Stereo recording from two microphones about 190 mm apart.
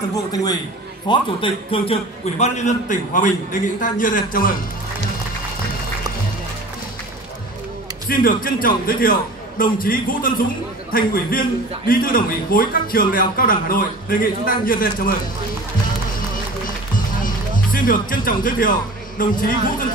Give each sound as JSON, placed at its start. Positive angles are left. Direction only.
{"t": 0.1, "sound": "a man's voice", "side_deg": 20}
{"t": 8.1, "sound": "a man's voice", "side_deg": 50}
{"t": 17.7, "sound": "speech", "side_deg": 45}